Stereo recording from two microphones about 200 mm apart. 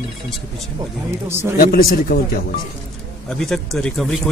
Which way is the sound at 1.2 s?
10° right (ahead or behind).